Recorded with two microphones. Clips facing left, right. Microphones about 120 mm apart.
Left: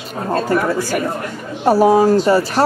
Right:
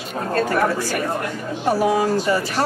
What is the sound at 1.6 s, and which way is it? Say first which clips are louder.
A woman's voice: left 7 dB; 35° left (ahead or behind).